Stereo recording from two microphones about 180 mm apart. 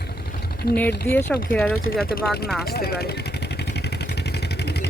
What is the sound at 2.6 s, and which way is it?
Vehicle, 60° left (ahead or behind).